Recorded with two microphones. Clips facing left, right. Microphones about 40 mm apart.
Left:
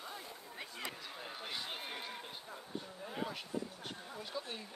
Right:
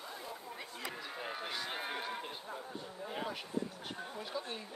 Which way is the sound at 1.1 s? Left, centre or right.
Right.